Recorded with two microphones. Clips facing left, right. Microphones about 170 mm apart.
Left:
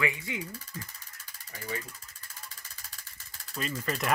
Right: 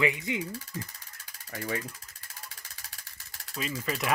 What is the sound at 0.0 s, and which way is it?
Speech, 20° right (ahead or behind).